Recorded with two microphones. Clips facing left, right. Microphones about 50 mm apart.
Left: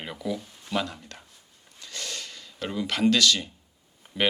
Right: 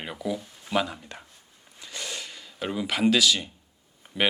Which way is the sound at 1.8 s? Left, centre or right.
Centre.